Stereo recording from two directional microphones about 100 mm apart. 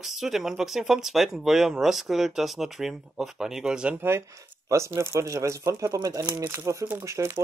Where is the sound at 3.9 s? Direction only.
25° right (ahead or behind).